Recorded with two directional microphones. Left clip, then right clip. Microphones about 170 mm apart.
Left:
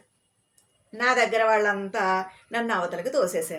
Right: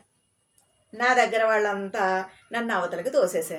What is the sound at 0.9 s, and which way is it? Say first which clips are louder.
A woman's voice: right 1 dB; 10° left (ahead or behind).